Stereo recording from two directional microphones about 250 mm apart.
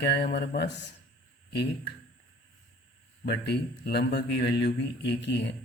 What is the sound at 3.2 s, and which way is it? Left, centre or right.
A man's voice, left.